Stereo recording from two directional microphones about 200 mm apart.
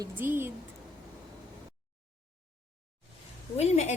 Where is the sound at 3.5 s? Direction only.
30° left (ahead or behind).